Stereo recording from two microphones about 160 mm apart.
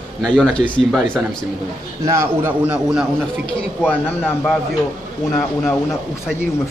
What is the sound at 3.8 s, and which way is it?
Speech, 10° left (ahead or behind).